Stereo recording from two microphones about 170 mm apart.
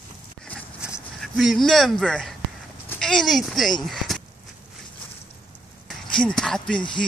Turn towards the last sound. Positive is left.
turn(degrees=5)  # may be behind; listen again after turning